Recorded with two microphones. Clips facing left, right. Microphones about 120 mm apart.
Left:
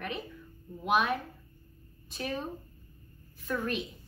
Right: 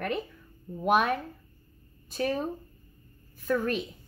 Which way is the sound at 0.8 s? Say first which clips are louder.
Right 4 dB; 45° right (ahead or behind).